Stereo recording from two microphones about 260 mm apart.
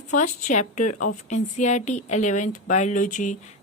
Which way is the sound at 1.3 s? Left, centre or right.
Left.